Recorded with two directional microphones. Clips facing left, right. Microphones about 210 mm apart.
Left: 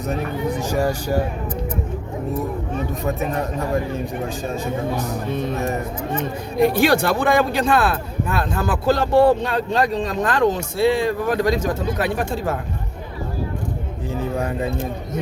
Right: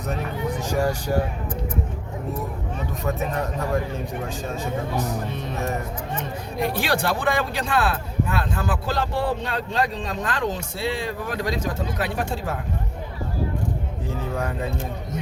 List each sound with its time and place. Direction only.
6.7 s speech: 45° left (ahead or behind)